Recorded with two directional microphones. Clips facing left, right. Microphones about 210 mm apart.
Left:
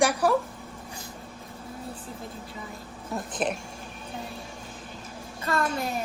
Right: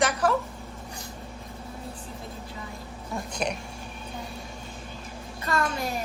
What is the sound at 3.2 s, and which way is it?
Speech, centre (ahead or behind).